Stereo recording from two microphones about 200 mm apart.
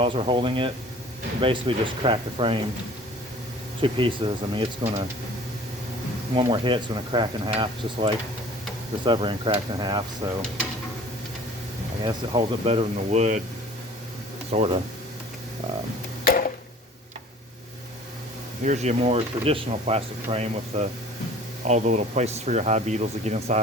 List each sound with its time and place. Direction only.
0.0 s speech: 25° right (ahead or behind)
3.8 s speech: 25° right (ahead or behind)
6.3 s speech: 25° right (ahead or behind)
12.0 s speech: 25° right (ahead or behind)
14.5 s speech: 30° right (ahead or behind)
16.2 s a sound: 45° left (ahead or behind)
18.6 s speech: 35° right (ahead or behind)